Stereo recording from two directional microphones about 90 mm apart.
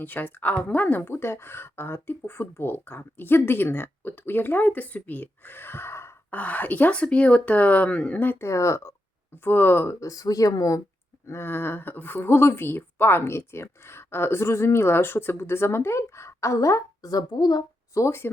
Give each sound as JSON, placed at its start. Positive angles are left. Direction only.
{"t": 0.0, "sound": "speech", "side_deg": 20}
{"t": 6.3, "sound": "speech", "side_deg": 15}
{"t": 8.4, "sound": "speech", "side_deg": 35}
{"t": 9.4, "sound": "speech", "side_deg": 25}
{"t": 11.3, "sound": "speech", "side_deg": 25}
{"t": 17.9, "sound": "speech", "side_deg": 30}